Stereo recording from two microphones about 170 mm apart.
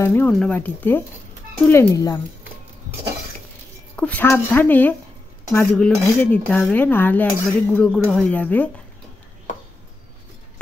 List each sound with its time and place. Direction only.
0.0 s dishes: 10° left (ahead or behind)
3.9 s dishes: 10° left (ahead or behind)